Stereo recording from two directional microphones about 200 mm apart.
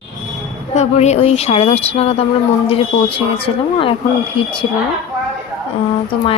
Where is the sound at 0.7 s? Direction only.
35° left (ahead or behind).